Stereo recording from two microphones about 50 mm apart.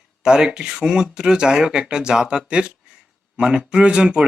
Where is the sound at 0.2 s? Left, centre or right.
Centre.